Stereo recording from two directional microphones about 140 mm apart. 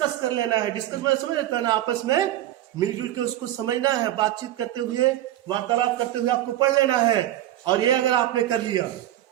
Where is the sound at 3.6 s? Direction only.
30° right (ahead or behind).